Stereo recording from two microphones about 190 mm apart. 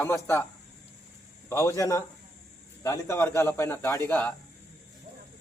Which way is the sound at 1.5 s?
15° left (ahead or behind).